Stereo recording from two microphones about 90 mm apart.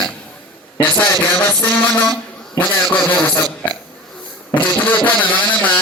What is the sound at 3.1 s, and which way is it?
Speech, 20° left (ahead or behind).